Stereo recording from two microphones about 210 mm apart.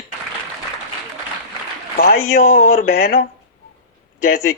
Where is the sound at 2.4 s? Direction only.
35° left (ahead or behind).